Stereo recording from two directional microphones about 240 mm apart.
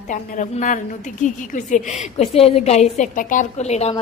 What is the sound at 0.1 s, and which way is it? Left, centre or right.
A woman's voice, left.